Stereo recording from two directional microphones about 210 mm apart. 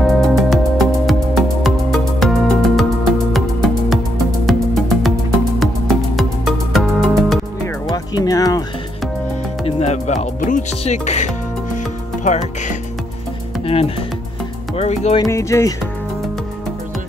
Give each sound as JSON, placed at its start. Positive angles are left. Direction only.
{"t": 0.0, "sound": "music", "side_deg": 0}
{"t": 7.9, "sound": "music", "side_deg": 15}
{"t": 9.7, "sound": "music", "side_deg": 30}
{"t": 13.7, "sound": "music", "side_deg": 25}
{"t": 15.2, "sound": "music", "side_deg": 15}